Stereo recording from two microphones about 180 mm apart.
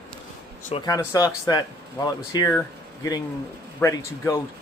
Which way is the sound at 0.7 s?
20° left (ahead or behind).